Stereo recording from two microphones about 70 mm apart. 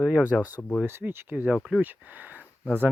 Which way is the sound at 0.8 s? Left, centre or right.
Right.